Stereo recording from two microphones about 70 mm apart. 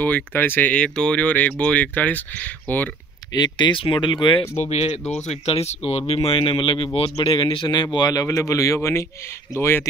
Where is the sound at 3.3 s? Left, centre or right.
Left.